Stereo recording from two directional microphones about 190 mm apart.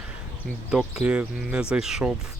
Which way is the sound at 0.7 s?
5° right (ahead or behind).